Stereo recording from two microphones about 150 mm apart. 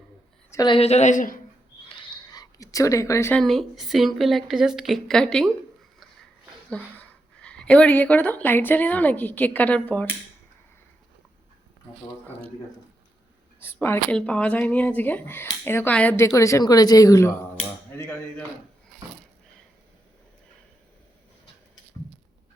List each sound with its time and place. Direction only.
0.5 s a woman's voice: 30° left (ahead or behind)
0.8 s speech: 45° left (ahead or behind)
1.9 s a sound: 30° left (ahead or behind)
3.3 s a woman's voice: centre (ahead or behind)
6.8 s speech: 10° left (ahead or behind)
13.8 s a woman's voice: 15° left (ahead or behind)